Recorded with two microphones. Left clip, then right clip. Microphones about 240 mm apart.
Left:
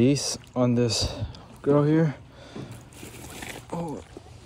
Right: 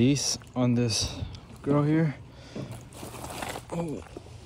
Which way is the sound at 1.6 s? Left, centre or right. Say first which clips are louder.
Left 4 dB; left.